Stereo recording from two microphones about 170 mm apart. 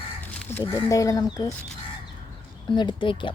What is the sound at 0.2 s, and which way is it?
Crow, 10° left (ahead or behind).